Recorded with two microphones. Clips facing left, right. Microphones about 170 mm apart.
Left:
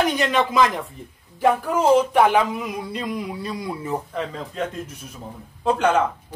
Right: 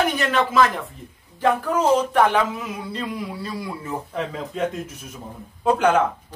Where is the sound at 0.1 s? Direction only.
15° left (ahead or behind).